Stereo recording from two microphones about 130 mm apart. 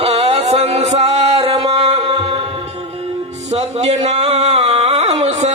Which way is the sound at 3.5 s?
60° right (ahead or behind).